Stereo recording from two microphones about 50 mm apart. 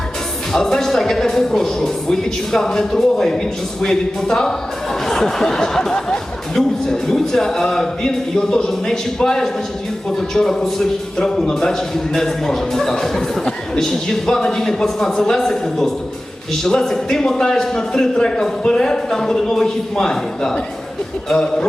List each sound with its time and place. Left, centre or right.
0.5 s a man's voice: centre